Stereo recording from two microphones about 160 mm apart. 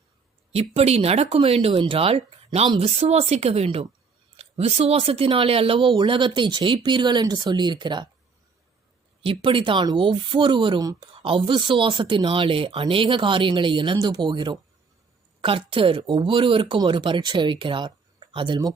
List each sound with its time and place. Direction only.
0.5 s speech: 40° right (ahead or behind)
9.2 s speech: 35° right (ahead or behind)